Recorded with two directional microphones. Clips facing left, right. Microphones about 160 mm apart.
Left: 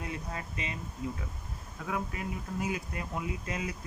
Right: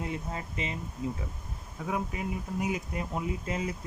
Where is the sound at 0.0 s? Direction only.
25° right (ahead or behind).